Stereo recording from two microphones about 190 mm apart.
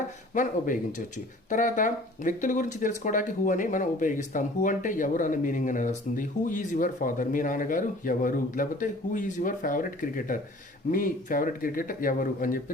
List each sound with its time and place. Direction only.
0.3 s speech: 45° left (ahead or behind)